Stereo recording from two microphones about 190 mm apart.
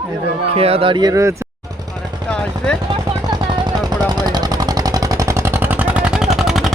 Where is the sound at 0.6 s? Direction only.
30° right (ahead or behind).